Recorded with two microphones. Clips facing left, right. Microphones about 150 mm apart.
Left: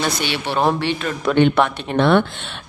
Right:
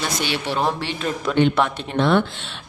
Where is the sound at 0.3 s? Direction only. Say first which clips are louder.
Left 3 dB; 60° left (ahead or behind).